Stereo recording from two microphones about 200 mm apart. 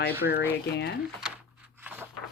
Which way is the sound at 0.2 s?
60° left (ahead or behind).